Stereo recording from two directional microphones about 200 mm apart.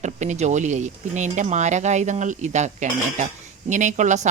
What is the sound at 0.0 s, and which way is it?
A woman's voice, 35° right (ahead or behind).